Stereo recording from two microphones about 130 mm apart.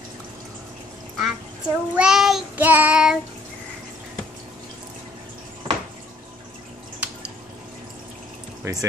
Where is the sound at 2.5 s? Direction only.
15° right (ahead or behind).